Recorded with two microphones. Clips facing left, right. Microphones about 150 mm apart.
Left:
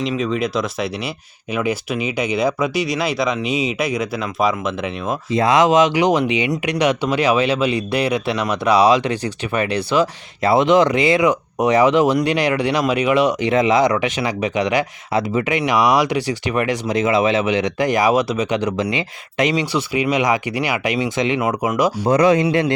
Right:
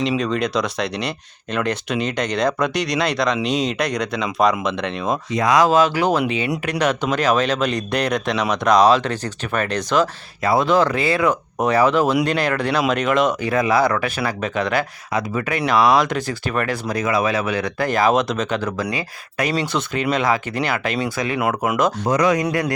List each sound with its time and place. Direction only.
0.2 s speech: 5° left (ahead or behind)
5.3 s speech: 25° left (ahead or behind); by 10.1 s 10° left (ahead or behind)
10.4 s speech: 25° left (ahead or behind)
21.8 s speech: 10° left (ahead or behind)
22.1 s speech: 30° left (ahead or behind)